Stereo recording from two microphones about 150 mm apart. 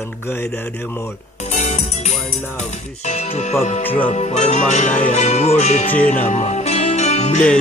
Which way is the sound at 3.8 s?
10° left (ahead or behind).